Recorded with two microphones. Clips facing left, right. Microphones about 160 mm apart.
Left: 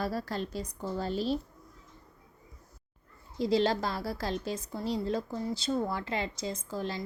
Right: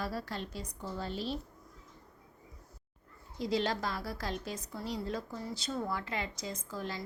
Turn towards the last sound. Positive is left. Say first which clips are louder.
# left 4 dB
turn(degrees=25)  # may be behind; listen again after turning